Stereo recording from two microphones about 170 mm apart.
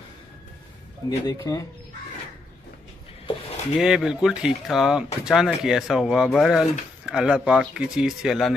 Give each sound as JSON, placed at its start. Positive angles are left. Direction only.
{"t": 1.2, "sound": "speech", "side_deg": 20}
{"t": 3.7, "sound": "speech", "side_deg": -5}